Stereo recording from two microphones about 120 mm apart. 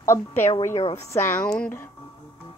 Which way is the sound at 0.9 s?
20° left (ahead or behind).